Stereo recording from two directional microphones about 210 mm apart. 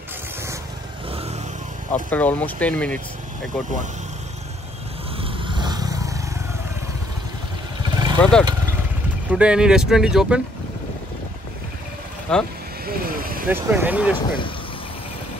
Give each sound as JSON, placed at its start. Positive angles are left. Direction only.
{"t": 1.9, "sound": "speech", "side_deg": 10}
{"t": 5.2, "sound": "vehicle", "side_deg": -20}
{"t": 7.9, "sound": "vehicle", "side_deg": -20}
{"t": 8.2, "sound": "speech", "side_deg": 5}
{"t": 12.3, "sound": "speech", "side_deg": 5}
{"t": 12.8, "sound": "vehicle", "side_deg": -45}
{"t": 13.5, "sound": "speech", "side_deg": -10}